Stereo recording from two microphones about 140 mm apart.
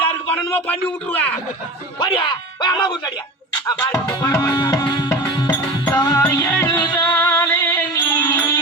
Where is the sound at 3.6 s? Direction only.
25° left (ahead or behind).